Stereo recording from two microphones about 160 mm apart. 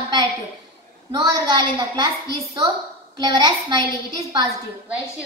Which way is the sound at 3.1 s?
25° right (ahead or behind).